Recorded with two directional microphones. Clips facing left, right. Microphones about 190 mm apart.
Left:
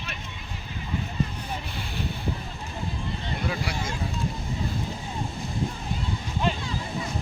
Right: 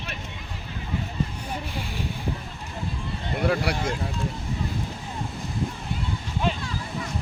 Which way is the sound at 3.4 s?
65° right (ahead or behind).